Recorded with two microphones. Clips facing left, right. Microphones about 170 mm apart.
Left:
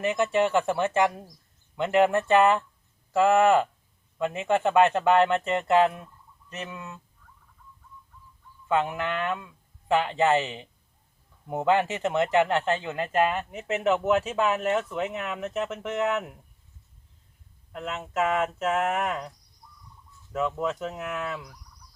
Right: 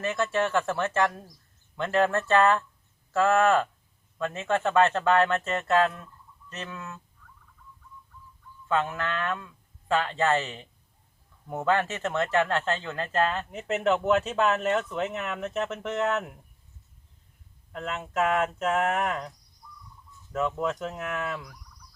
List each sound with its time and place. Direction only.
0.0 s speech: 15° left (ahead or behind)
8.6 s speech: 15° left (ahead or behind)
13.5 s speech: centre (ahead or behind)
17.7 s speech: 5° left (ahead or behind)
20.3 s speech: centre (ahead or behind)